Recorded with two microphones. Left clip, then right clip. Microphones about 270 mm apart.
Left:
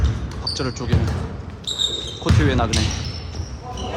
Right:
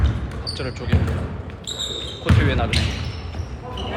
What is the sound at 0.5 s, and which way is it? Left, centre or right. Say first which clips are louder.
Speech: left 2 dB; centre.